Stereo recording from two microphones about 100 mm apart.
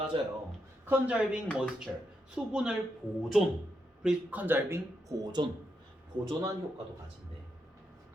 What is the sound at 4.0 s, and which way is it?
Speech, 10° right (ahead or behind).